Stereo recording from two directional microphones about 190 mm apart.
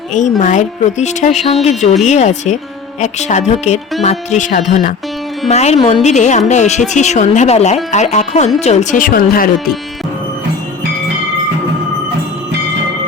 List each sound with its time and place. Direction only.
0.1 s speech: 40° left (ahead or behind)